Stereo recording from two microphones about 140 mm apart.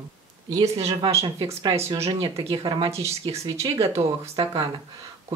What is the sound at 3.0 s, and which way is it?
Speech, 45° right (ahead or behind).